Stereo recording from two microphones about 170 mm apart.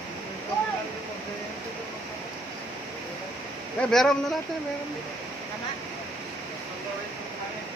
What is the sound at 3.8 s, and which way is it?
Speech, 5° left (ahead or behind).